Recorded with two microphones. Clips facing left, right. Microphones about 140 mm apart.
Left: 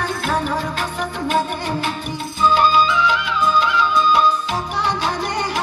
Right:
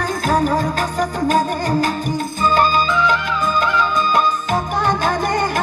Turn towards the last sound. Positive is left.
turn(degrees=-50)  # may be behind; listen again after turning